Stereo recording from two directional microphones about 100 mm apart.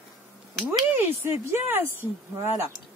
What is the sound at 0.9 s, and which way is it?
Speech, 20° right (ahead or behind).